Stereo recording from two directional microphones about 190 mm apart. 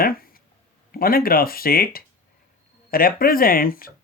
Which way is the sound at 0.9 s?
50° left (ahead or behind).